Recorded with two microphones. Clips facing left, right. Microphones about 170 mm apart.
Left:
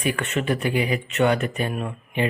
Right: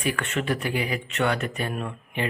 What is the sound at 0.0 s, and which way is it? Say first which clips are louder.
Speech: left 3 dB; 20° left (ahead or behind).